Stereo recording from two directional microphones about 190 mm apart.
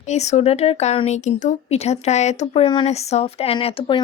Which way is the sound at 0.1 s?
35° left (ahead or behind).